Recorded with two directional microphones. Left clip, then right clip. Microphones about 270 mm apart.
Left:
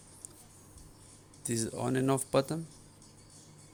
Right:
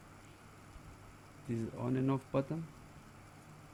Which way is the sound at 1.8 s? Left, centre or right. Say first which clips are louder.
Left 6 dB; left.